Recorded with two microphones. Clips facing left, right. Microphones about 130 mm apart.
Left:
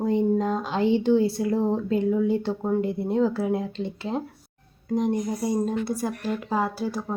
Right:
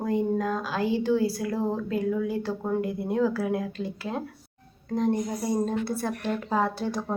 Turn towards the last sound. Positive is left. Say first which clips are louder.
# even
turn(degrees=5)  # may be behind; listen again after turning